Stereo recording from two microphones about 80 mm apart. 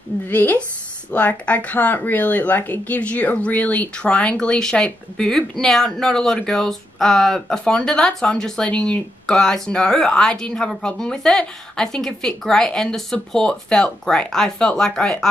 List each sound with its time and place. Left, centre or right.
0.3 s speech: left